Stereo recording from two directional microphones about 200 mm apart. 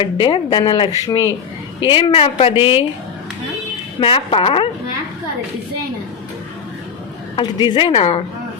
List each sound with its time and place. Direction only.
0.0 s a woman's voice: 25° left (ahead or behind)
4.0 s a woman's voice: 25° left (ahead or behind)
7.3 s a woman's voice: 25° left (ahead or behind)